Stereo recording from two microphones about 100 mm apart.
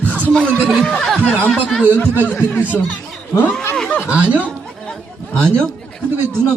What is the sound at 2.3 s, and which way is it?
Speech, 25° left (ahead or behind).